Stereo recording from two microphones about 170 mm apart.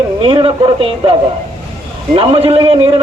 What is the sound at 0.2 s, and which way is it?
Speech, 30° right (ahead or behind).